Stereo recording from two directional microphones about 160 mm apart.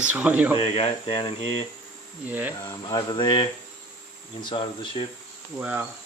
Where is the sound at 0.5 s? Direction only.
35° left (ahead or behind).